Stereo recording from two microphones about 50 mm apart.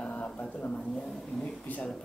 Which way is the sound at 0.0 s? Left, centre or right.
Left.